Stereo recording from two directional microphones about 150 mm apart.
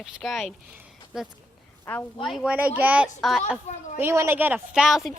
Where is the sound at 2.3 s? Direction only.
5° right (ahead or behind).